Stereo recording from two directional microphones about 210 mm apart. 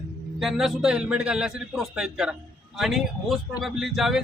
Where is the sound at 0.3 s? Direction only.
Centre (ahead or behind).